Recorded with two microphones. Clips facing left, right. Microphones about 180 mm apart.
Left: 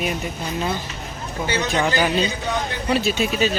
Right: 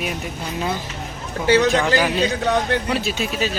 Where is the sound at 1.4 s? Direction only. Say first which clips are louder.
Right 6 dB; 90° right.